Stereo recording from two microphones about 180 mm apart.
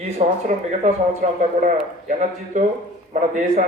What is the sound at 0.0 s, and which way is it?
A man's voice, 40° right (ahead or behind).